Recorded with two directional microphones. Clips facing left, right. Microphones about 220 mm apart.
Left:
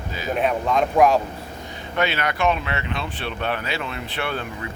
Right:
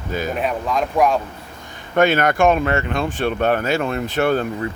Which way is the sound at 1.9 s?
50° right (ahead or behind).